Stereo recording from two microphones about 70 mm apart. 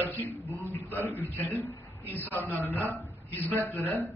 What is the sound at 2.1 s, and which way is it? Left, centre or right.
A man's voice, left.